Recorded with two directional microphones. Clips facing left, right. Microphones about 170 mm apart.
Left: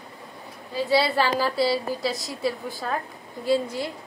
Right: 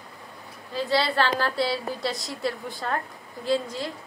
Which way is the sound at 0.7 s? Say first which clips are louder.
Left 2 dB; 10° left (ahead or behind).